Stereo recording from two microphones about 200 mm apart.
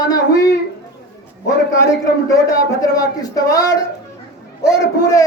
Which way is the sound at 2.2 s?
15° left (ahead or behind).